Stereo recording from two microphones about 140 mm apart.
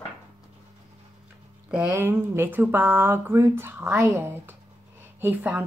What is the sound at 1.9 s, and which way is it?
Speech, 15° right (ahead or behind).